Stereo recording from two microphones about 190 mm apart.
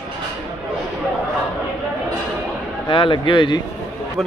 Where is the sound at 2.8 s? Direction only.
25° left (ahead or behind).